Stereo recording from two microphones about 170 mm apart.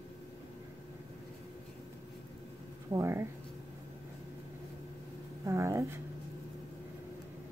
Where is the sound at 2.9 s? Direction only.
15° right (ahead or behind).